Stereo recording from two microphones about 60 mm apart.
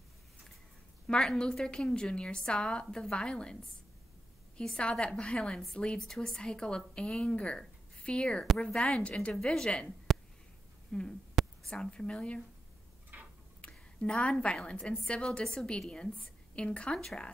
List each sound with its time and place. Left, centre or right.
1.0 s speech: centre
4.6 s a woman's voice: centre
11.4 s whispering: centre
11.8 s speech: centre
13.1 s tick-tock: right
13.6 s a woman's voice: centre
17.0 s speech: centre